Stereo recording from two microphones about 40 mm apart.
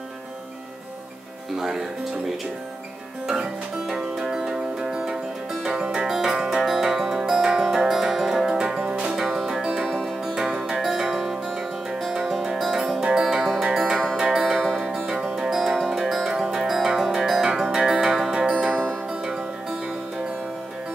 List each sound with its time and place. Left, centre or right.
1.6 s speech: centre
3.8 s music: centre
8.7 s music: right
9.1 s music: centre
13.7 s music: right
14.4 s music: centre
18.7 s music: centre